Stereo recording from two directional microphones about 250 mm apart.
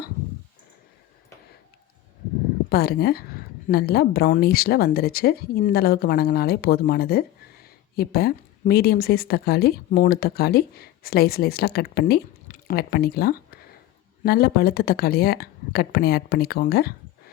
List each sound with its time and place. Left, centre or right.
2.6 s a woman's voice: left